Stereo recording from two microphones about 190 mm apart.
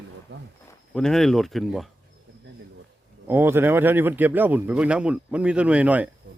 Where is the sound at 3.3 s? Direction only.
10° right (ahead or behind).